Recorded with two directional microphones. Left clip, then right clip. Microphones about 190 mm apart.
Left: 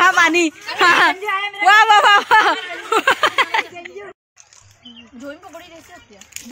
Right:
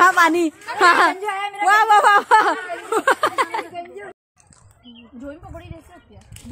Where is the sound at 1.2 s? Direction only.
55° right (ahead or behind).